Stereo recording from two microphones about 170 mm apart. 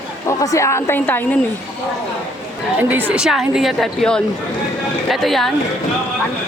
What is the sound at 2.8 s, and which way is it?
A woman's voice, 10° right (ahead or behind).